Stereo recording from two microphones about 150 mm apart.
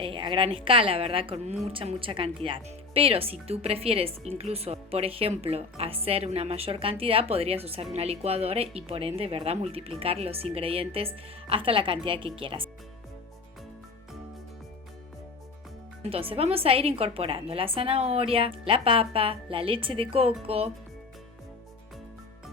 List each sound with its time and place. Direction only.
0.0 s a woman's voice: 35° right (ahead or behind)
16.0 s a woman's voice: 40° right (ahead or behind)